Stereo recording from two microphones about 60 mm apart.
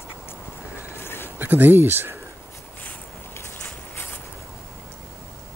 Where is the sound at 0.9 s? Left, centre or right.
Left.